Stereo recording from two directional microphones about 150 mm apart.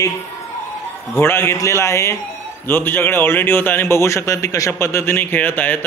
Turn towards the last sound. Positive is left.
turn(degrees=10)  # may be behind; listen again after turning